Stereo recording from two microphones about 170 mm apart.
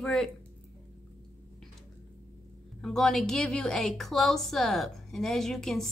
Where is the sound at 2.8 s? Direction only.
5° left (ahead or behind).